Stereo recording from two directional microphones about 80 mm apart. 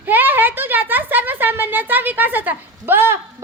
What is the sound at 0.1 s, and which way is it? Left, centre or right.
A woman's voice, right.